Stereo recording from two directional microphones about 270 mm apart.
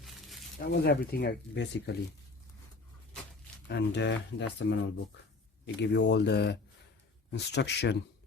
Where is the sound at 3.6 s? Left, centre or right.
Left.